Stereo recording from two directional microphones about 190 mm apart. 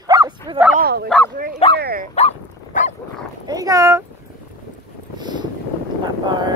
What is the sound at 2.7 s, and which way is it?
Dog, 40° left (ahead or behind).